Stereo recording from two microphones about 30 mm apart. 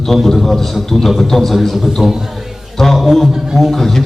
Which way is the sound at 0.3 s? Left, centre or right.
Centre.